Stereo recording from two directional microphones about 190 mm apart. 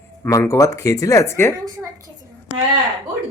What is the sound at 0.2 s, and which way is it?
Speech, 15° left (ahead or behind).